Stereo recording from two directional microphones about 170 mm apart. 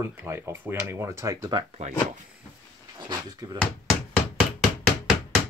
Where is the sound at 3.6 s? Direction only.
Centre (ahead or behind).